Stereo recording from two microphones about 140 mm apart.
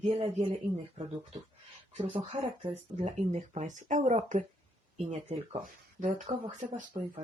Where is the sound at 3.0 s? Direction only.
55° right (ahead or behind).